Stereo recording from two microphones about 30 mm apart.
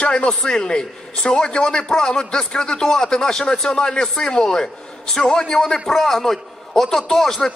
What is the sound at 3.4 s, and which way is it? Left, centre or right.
A man's voice, left.